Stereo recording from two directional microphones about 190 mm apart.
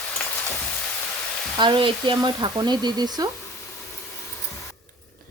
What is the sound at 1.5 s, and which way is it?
Speech, 25° right (ahead or behind).